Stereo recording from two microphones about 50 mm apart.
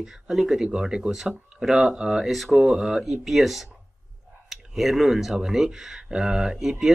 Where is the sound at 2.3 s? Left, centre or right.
Centre.